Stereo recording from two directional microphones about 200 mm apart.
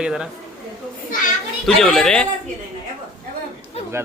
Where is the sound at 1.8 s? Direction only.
5° left (ahead or behind).